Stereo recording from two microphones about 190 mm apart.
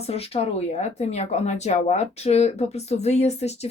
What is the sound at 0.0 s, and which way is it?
Speech, 35° left (ahead or behind).